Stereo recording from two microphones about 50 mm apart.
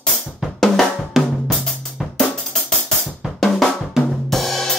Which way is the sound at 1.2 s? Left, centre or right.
Centre.